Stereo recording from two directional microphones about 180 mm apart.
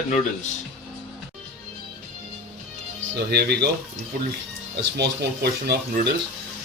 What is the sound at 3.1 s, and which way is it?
Speech, 65° right (ahead or behind).